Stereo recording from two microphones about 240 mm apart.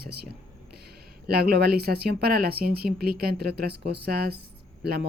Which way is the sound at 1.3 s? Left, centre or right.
Right.